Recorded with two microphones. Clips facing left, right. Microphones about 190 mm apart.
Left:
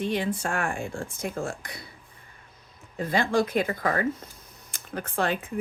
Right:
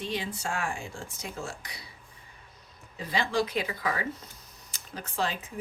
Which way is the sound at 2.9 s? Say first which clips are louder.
Left 5 dB; 50° left (ahead or behind).